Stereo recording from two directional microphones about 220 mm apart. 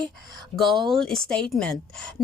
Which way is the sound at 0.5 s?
Centre (ahead or behind).